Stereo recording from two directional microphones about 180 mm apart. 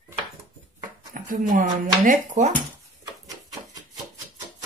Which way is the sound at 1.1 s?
50° right (ahead or behind).